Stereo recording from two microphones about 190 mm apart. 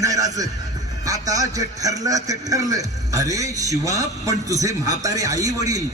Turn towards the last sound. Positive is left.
turn(degrees=-20)  # may be behind; listen again after turning